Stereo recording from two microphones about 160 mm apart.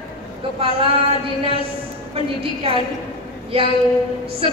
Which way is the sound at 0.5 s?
35° right (ahead or behind).